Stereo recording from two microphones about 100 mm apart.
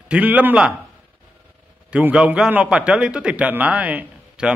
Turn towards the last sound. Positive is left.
turn(degrees=-15)  # may be behind; listen again after turning